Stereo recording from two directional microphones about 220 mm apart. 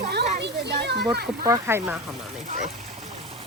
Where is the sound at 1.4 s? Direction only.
15° right (ahead or behind).